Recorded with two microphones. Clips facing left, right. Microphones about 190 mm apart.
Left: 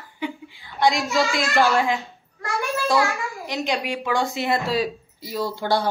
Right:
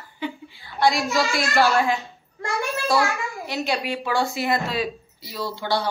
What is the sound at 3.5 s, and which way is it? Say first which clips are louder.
A woman's voice: even; 15° left (ahead or behind).